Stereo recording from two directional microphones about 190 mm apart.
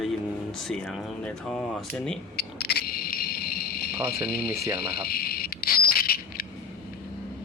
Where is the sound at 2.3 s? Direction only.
55° left (ahead or behind).